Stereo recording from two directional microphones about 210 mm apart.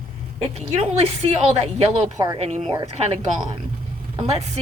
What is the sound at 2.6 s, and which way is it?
Speech, 20° right (ahead or behind).